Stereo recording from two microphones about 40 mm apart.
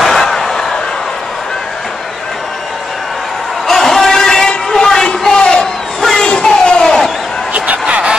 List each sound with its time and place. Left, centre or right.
0.0 s slam: centre
3.6 s vehicle: centre
5.9 s crowd: centre
7.5 s a sound: right